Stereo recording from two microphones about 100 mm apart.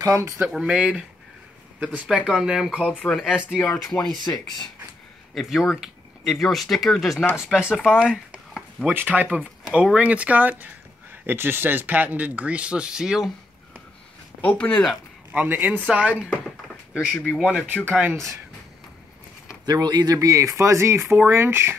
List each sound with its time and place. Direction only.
0.0 s speech: 30° right (ahead or behind)
0.5 s speech: 10° right (ahead or behind)
2.9 s speech: 10° left (ahead or behind)
3.8 s speech: 5° left (ahead or behind)
5.3 s speech: centre (ahead or behind)
8.0 s a sound: 5° right (ahead or behind)
8.9 s speech: 15° right (ahead or behind)
14.4 s speech: 10° left (ahead or behind)
15.3 s speech: 20° right (ahead or behind)
17.3 s speech: centre (ahead or behind)
19.6 s speech: 40° right (ahead or behind); by 21.7 s 25° right (ahead or behind)